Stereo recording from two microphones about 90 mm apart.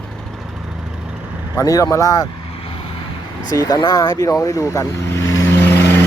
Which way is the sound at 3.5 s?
45° left (ahead or behind).